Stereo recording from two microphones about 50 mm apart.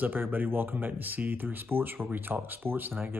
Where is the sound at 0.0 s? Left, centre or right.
Right.